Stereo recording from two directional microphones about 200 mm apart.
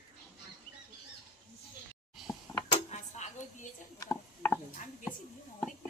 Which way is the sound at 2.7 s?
35° left (ahead or behind).